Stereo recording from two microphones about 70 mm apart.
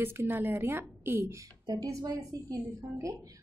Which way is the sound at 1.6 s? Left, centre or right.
Right.